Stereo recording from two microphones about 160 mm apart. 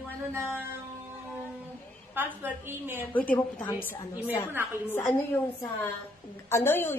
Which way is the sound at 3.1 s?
10° left (ahead or behind).